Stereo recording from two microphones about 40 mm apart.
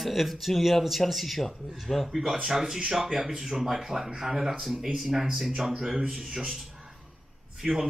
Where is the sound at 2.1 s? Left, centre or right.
Centre.